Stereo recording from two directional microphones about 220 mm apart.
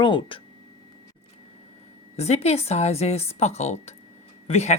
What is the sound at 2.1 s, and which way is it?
Speech, 30° left (ahead or behind).